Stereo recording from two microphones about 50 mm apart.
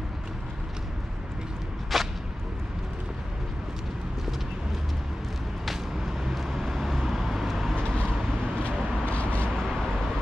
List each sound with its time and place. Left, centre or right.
1.9 s a sound: centre
5.7 s vehicle: centre
8.6 s vehicle: left
9.6 s vehicle: centre